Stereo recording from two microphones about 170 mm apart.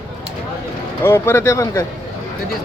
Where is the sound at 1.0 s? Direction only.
15° left (ahead or behind).